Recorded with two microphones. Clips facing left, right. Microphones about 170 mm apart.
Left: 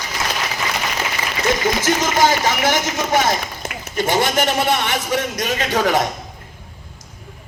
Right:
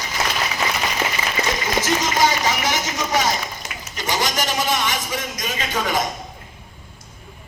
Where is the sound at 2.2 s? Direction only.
55° left (ahead or behind).